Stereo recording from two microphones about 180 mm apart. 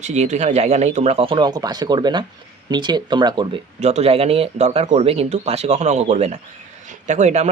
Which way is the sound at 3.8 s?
35° right (ahead or behind).